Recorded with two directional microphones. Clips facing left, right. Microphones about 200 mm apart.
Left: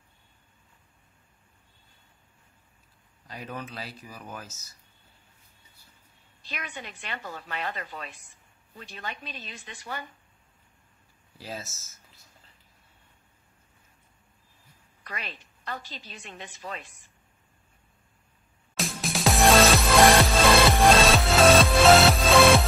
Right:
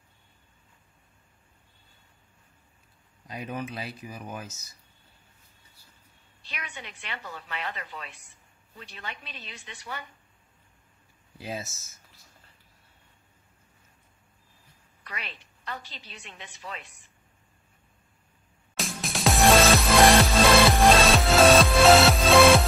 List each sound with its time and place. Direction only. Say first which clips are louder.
3.3 s speech: right 4 dB; 15° right (ahead or behind)
6.4 s a woman's voice: left 3 dB; 45° left (ahead or behind)
11.3 s speech: right 3 dB; 20° right (ahead or behind)
15.0 s a woman's voice: left 2 dB; 45° left (ahead or behind)
18.8 s music: left 2 dB; centre (ahead or behind)